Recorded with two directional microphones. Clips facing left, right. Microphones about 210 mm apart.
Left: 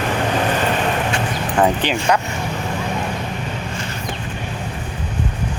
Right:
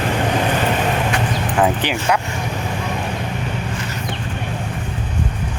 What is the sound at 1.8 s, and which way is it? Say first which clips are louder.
Speech: left 1 dB; 15° right (ahead or behind).